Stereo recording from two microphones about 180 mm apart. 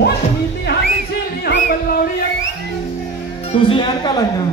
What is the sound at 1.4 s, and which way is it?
Music, 60° left (ahead or behind).